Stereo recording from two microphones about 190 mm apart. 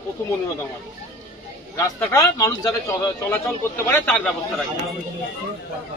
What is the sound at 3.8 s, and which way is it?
Speech, 10° left (ahead or behind).